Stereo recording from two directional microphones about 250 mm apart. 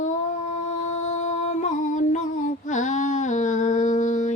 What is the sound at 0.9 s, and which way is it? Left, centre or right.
Female singing, left.